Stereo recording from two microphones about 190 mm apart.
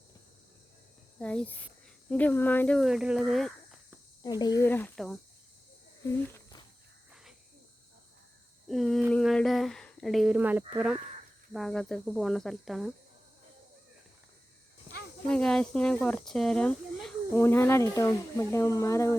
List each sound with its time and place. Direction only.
1.2 s speech: 5° left (ahead or behind)
4.2 s speech: 20° left (ahead or behind); by 5.2 s centre (ahead or behind)
6.0 s cricket: 15° left (ahead or behind)
8.6 s a sound: centre (ahead or behind)
9.1 s speech: 5° left (ahead or behind)
15.3 s speech: 5° left (ahead or behind)